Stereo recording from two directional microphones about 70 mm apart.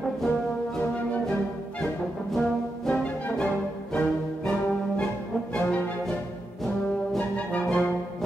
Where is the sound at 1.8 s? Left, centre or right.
Centre.